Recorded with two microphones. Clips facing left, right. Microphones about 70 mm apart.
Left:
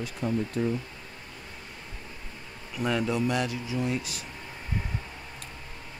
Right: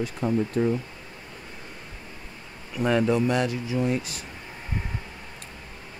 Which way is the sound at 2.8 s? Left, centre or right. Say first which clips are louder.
Right 5 dB; right.